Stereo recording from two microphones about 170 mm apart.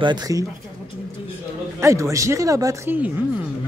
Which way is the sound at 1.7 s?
15° right (ahead or behind).